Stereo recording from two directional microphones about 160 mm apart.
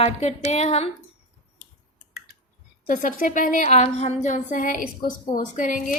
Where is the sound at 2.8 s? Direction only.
60° left (ahead or behind).